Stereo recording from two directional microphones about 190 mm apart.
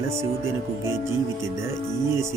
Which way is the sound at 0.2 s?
15° right (ahead or behind).